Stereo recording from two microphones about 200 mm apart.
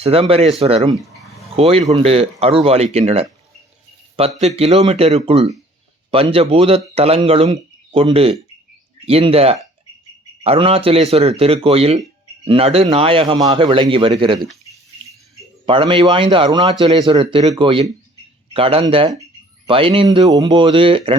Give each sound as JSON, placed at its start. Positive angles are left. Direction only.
{"t": 0.0, "sound": "a man's voice", "side_deg": -30}
{"t": 15.6, "sound": "a man's voice", "side_deg": -25}